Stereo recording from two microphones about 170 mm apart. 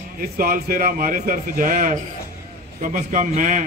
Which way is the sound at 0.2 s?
60° right (ahead or behind).